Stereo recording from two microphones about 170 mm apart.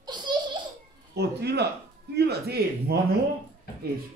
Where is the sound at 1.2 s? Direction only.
75° right (ahead or behind).